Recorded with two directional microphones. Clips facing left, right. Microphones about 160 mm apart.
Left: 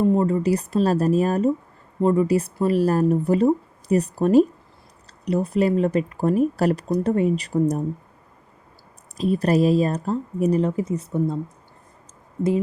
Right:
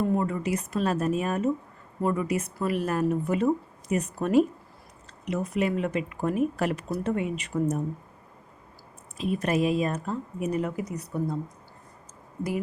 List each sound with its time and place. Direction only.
0.0 s speech: 25° left (ahead or behind)
9.1 s speech: 35° left (ahead or behind)
12.4 s speech: 25° left (ahead or behind)